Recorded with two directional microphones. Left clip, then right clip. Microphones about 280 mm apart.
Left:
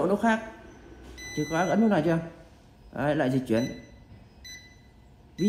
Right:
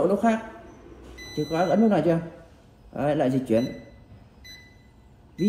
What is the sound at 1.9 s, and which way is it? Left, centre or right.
Speech, left.